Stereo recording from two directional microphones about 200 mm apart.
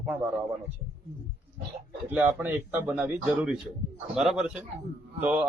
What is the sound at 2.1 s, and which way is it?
A man's voice, 10° right (ahead or behind).